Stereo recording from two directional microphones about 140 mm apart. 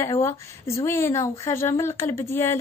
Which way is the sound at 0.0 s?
20° left (ahead or behind).